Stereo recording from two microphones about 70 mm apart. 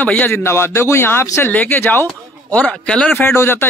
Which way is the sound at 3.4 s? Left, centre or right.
Left.